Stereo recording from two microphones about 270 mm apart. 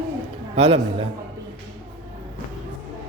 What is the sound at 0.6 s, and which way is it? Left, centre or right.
Speech, right.